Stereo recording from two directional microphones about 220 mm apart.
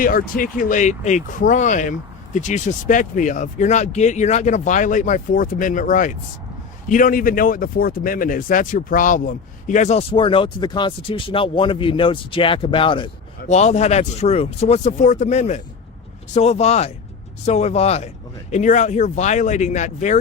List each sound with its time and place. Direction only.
0.0 s speech: 40° left (ahead or behind)